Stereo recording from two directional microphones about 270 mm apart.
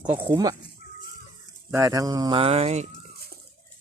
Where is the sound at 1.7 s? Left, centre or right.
Centre.